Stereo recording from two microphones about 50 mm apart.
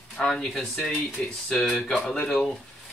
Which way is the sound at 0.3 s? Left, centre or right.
Centre.